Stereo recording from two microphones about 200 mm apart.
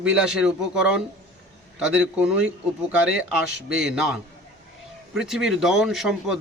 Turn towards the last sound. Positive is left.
turn(degrees=0)  # may be behind; listen again after turning